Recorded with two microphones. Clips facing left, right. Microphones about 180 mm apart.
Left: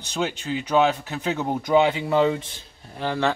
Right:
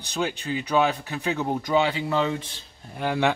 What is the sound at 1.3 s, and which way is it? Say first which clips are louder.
Speech: left 3 dB; 20° left (ahead or behind).